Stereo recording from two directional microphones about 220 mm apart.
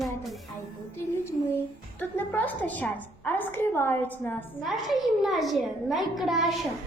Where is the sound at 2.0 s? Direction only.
5° left (ahead or behind).